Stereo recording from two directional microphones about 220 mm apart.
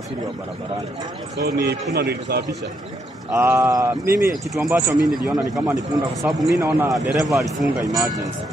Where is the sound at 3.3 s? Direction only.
15° right (ahead or behind).